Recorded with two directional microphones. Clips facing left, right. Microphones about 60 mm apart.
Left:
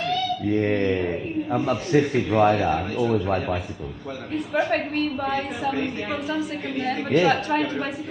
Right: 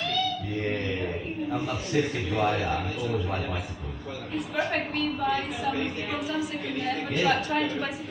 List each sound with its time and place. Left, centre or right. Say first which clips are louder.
0.6 s a man's voice: left 4 dB; left
4.7 s a man's voice: left 5 dB; left